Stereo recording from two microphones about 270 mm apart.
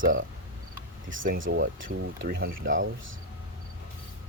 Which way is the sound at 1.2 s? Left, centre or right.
Right.